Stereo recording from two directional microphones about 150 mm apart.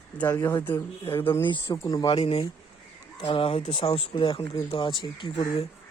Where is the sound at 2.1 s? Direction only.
40° left (ahead or behind).